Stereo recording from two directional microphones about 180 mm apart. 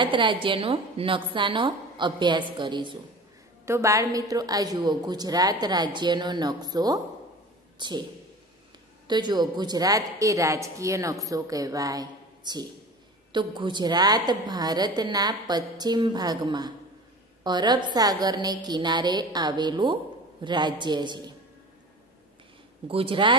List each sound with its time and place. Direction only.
0.0 s a woman's voice: 25° right (ahead or behind)
3.6 s a woman's voice: 15° right (ahead or behind)
9.0 s a woman's voice: 25° right (ahead or behind)
22.8 s a woman's voice: 30° right (ahead or behind)